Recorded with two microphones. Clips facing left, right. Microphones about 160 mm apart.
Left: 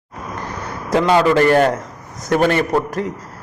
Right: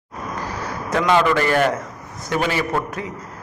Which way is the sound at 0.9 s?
30° left (ahead or behind).